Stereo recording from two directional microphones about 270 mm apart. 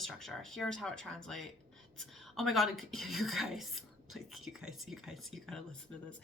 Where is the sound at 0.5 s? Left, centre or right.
Centre.